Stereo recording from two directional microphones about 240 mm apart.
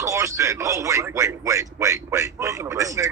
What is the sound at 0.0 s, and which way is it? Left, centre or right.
A man's voice, centre.